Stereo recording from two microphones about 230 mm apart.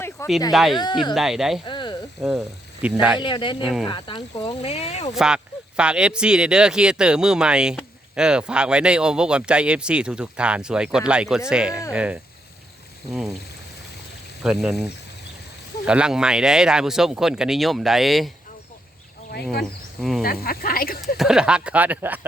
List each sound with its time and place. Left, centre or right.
0.2 s speech: centre
0.5 s speech: centre
0.8 s speech: centre
1.1 s speech: centre
1.6 s a sound: left
2.8 s speech: centre
3.2 s speech: left
3.6 s speech: centre
3.8 s speech: centre
5.1 s speech: centre
14.4 s speech: centre
20.0 s speech: centre
20.2 s speech: left
21.2 s speech: centre